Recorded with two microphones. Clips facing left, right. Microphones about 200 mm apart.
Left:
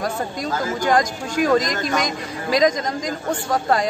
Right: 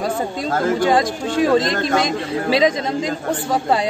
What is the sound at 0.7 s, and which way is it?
A man's voice, 30° right (ahead or behind).